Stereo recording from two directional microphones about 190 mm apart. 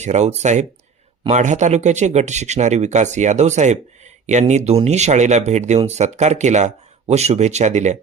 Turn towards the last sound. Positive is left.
turn(degrees=-40)  # may be behind; listen again after turning